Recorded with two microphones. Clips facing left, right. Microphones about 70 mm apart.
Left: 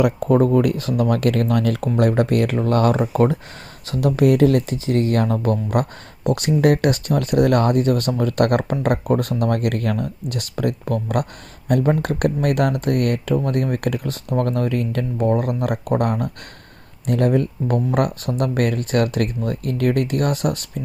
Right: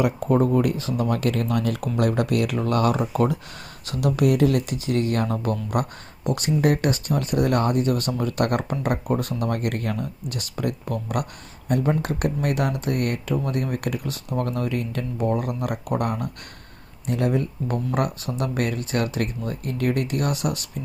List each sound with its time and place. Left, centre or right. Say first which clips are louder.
0.0 s speech: left 4 dB; left